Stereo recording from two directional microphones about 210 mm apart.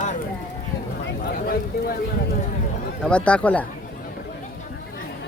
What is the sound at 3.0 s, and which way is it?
Speech, 5° left (ahead or behind).